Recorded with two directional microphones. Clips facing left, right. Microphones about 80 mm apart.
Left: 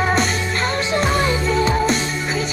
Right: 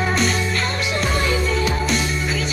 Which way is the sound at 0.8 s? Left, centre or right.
Left.